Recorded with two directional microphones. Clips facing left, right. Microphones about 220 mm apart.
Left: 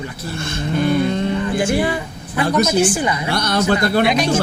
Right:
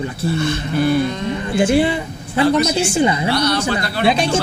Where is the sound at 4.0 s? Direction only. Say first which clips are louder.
Even; 30° right (ahead or behind).